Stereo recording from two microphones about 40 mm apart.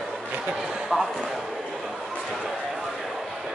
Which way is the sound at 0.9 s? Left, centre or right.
Centre.